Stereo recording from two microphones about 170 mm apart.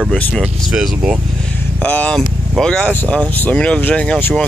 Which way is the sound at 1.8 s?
10° left (ahead or behind).